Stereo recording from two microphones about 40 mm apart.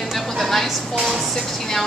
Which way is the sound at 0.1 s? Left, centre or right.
Centre.